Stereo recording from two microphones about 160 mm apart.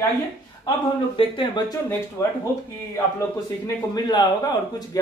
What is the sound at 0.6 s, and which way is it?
A man's voice, 30° left (ahead or behind).